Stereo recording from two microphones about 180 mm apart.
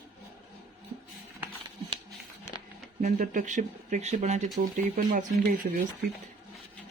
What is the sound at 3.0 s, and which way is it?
Speech, 45° right (ahead or behind).